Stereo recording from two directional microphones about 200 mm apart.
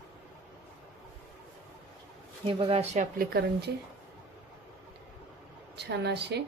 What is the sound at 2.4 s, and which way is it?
Speech, 25° right (ahead or behind).